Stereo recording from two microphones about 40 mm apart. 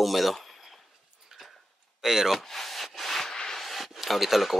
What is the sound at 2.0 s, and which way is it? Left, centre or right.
Speech, centre.